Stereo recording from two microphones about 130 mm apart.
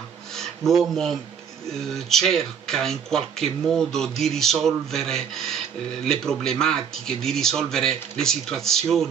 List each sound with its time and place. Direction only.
0.4 s speech: centre (ahead or behind)